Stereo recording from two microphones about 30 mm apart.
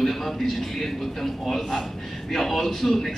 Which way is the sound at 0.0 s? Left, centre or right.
Centre.